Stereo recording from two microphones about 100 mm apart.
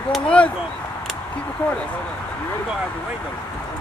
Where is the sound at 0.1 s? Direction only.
10° left (ahead or behind).